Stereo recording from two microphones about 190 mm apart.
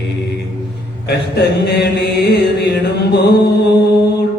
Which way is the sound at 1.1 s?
60° left (ahead or behind).